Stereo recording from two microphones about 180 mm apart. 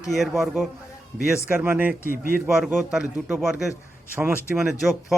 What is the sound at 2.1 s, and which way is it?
Speech, 50° right (ahead or behind).